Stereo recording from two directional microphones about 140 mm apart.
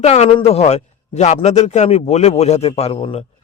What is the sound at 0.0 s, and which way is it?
A man's voice, 50° left (ahead or behind).